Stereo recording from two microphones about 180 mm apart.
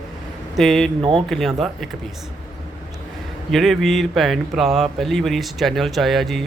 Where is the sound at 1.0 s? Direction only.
30° right (ahead or behind).